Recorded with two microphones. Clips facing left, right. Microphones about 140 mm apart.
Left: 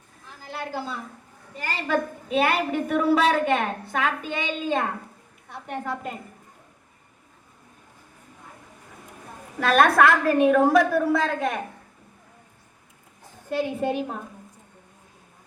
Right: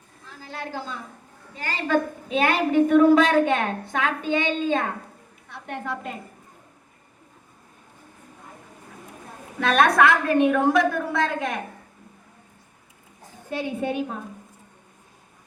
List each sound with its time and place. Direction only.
0.5 s a woman's voice: 5° left (ahead or behind)
9.6 s a woman's voice: 5° left (ahead or behind)
13.5 s a woman's voice: centre (ahead or behind)